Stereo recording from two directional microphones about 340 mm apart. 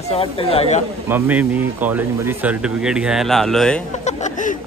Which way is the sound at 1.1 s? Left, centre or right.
Centre.